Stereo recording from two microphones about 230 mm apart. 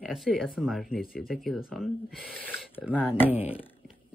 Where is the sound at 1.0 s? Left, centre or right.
Left.